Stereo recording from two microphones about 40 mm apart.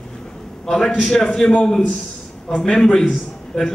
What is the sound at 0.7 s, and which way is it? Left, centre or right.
Speech, centre.